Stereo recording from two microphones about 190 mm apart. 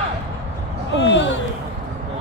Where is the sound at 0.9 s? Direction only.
75° left (ahead or behind).